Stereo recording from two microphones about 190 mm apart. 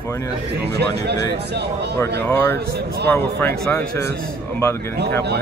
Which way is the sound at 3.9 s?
60° right (ahead or behind).